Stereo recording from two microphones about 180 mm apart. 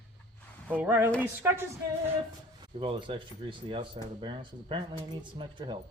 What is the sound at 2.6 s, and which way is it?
Speech, 30° right (ahead or behind).